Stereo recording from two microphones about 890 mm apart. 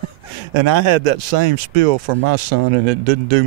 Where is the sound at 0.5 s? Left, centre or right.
Right.